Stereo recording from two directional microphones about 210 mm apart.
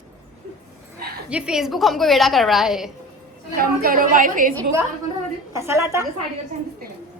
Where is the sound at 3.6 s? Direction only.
45° right (ahead or behind).